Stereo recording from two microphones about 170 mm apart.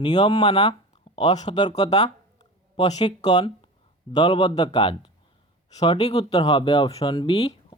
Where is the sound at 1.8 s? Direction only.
40° left (ahead or behind).